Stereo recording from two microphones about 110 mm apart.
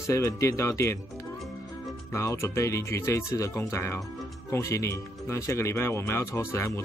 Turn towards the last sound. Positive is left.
turn(degrees=25)  # may be behind; listen again after turning